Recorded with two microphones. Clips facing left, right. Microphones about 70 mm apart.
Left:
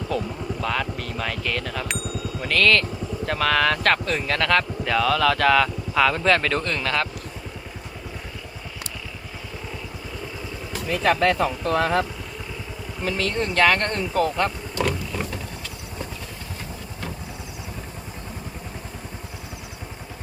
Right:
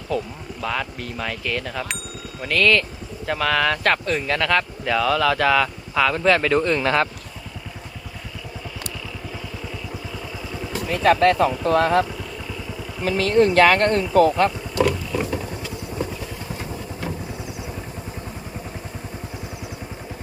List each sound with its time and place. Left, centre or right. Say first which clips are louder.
0.1 s speech: right 2 dB; centre
6.8 s speech: right 5 dB; right
10.8 s speech: right 3 dB; centre
14.4 s vehicle: right 5 dB; centre